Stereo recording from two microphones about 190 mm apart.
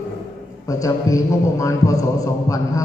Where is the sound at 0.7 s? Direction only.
15° left (ahead or behind).